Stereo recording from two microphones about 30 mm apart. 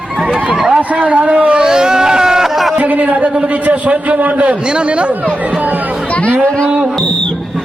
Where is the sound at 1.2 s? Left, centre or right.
Right.